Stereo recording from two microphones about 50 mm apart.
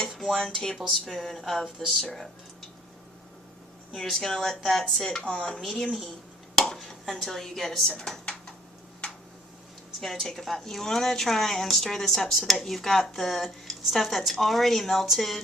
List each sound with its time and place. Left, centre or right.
0.3 s speech: centre
0.8 s a woman's voice: centre
3.9 s a woman's voice: centre
5.2 s speech: centre
6.6 s speech: centre
9.0 s a sound: left
10.0 s a woman's voice: centre